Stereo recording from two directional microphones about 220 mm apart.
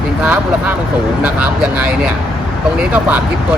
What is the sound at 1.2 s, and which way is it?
Speech, 5° right (ahead or behind).